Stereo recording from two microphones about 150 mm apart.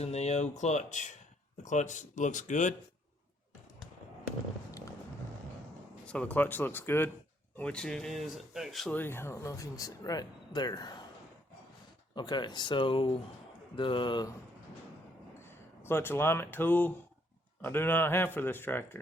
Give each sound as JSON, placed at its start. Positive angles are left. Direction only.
{"t": 0.0, "sound": "speech", "side_deg": 45}
{"t": 6.1, "sound": "speech", "side_deg": 10}
{"t": 9.0, "sound": "speech", "side_deg": 15}
{"t": 12.1, "sound": "speech", "side_deg": 30}
{"t": 15.4, "sound": "speech", "side_deg": 15}